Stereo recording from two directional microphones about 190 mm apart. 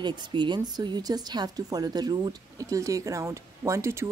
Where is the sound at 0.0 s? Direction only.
25° right (ahead or behind).